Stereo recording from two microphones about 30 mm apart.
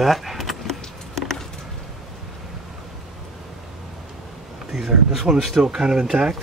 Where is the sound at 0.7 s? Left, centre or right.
Centre.